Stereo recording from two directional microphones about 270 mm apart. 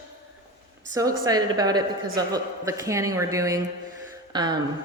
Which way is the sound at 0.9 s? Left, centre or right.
Centre.